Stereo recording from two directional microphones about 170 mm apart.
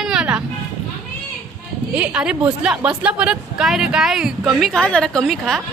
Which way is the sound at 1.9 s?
5° right (ahead or behind).